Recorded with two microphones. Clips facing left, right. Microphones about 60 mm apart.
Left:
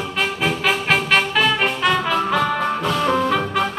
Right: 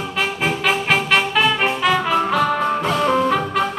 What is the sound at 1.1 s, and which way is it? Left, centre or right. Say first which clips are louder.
Music: right 1 dB; centre.